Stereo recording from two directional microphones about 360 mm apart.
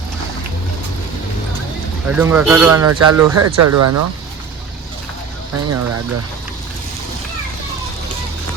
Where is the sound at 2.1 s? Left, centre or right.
Centre.